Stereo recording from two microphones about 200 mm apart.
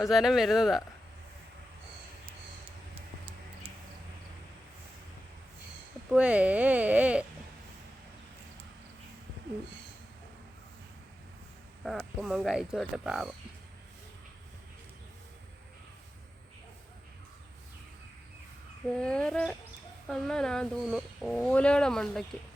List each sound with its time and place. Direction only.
0.0 s speech: centre (ahead or behind)
2.9 s tick-tock: 25° right (ahead or behind)
6.1 s speech: 5° right (ahead or behind)
12.2 s speech: centre (ahead or behind)
18.9 s speech: 5° left (ahead or behind)